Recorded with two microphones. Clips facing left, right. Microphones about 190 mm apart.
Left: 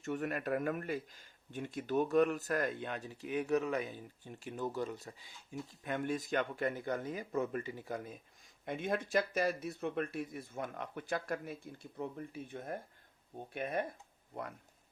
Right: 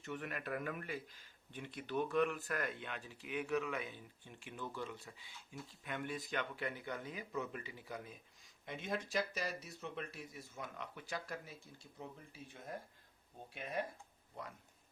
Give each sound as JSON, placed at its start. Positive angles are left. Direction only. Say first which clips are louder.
{"t": 0.0, "sound": "speech", "louder": "left 7 dB", "side_deg": 45}